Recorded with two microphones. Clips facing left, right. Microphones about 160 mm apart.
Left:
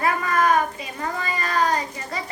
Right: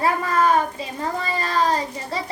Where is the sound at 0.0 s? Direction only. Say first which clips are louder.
Right 2 dB; 30° right (ahead or behind).